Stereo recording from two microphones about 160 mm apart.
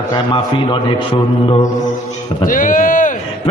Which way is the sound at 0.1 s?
30° left (ahead or behind).